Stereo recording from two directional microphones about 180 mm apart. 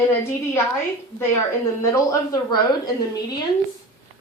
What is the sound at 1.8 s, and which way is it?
Speech, 20° left (ahead or behind).